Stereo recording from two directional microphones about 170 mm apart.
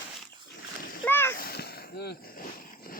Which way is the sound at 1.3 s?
65° left (ahead or behind).